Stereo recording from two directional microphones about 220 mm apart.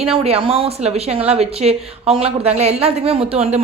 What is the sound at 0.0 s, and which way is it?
A man's voice, 25° right (ahead or behind).